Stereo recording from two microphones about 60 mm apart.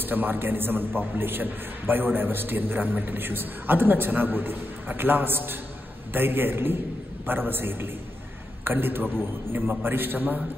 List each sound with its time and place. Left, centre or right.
0.0 s a man's voice: right